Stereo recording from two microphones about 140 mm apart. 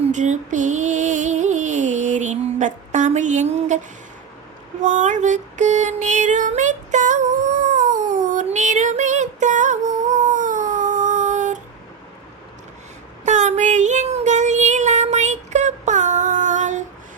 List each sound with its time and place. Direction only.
0.0 s music: 60° right (ahead or behind)
4.8 s female singing: 60° right (ahead or behind)
13.2 s child singing: 60° right (ahead or behind)